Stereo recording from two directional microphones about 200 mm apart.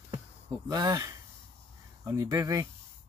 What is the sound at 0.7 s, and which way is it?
Speech, 20° right (ahead or behind).